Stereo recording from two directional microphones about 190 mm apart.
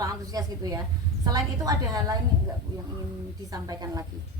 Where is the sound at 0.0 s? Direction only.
20° right (ahead or behind).